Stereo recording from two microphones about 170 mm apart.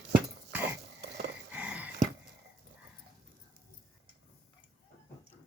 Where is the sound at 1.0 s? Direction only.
80° right.